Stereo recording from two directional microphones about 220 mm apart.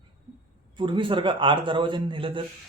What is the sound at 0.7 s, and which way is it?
A man's voice, 20° right (ahead or behind).